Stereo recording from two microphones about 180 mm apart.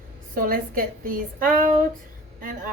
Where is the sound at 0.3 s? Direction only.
50° right (ahead or behind).